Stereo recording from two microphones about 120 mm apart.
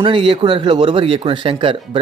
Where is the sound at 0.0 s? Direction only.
45° right (ahead or behind).